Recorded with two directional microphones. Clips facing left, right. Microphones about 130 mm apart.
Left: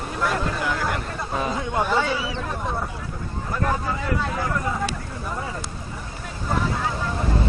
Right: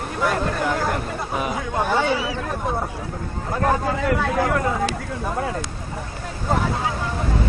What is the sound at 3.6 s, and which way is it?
Speech, 60° right (ahead or behind).